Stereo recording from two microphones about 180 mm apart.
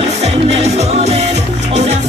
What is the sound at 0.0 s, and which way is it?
Music, 35° right (ahead or behind).